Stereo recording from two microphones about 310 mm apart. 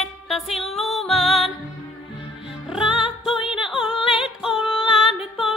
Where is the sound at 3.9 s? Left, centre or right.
Centre.